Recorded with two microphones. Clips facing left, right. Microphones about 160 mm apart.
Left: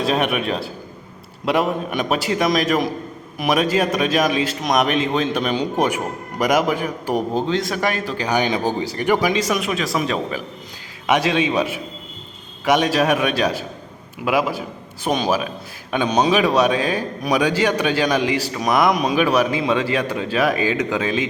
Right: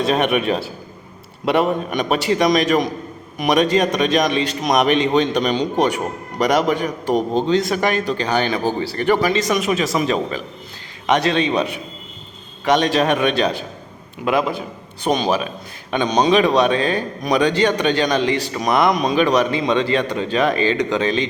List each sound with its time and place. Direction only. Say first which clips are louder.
0.0 s a man's voice: right 2 dB; centre (ahead or behind)